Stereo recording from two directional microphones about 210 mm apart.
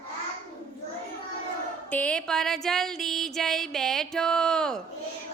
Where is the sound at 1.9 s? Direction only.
5° left (ahead or behind).